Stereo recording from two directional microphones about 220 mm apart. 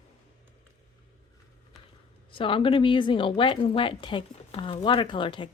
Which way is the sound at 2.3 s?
25° left (ahead or behind).